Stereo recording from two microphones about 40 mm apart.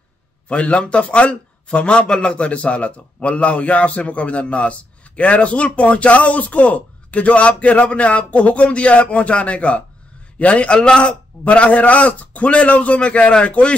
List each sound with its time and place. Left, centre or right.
0.5 s a man's voice: left